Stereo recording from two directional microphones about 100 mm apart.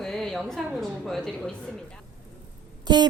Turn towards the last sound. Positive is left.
turn(degrees=-45)  # may be behind; listen again after turning